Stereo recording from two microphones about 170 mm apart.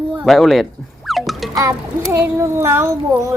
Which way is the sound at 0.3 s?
Centre (ahead or behind).